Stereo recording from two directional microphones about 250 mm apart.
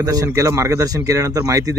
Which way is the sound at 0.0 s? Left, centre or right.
Centre.